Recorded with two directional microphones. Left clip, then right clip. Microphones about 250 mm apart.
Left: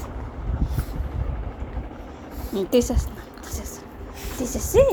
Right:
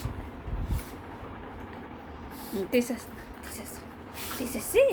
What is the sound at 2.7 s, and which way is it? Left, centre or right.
Speech, centre.